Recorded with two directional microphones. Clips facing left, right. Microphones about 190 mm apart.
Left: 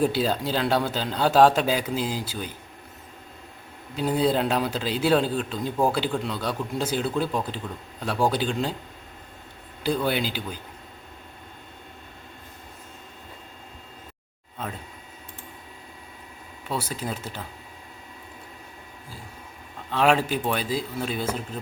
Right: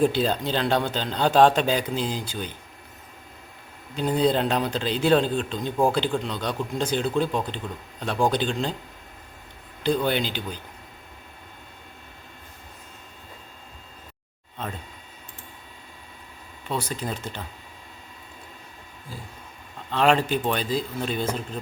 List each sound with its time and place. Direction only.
0.0 s speech: 5° left (ahead or behind)
3.9 s speech: 5° left (ahead or behind)
9.8 s speech: 5° left (ahead or behind)
16.6 s speech: 5° left (ahead or behind)
19.9 s speech: 5° left (ahead or behind)